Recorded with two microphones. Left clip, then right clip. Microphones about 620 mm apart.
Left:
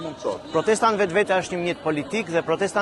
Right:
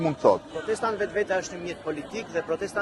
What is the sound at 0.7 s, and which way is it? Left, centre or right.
Speech, left.